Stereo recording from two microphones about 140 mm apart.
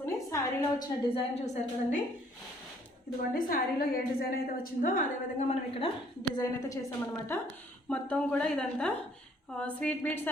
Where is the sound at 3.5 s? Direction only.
90° left.